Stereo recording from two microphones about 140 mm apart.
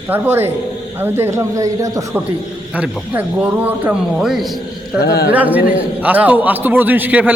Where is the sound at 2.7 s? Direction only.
10° right (ahead or behind).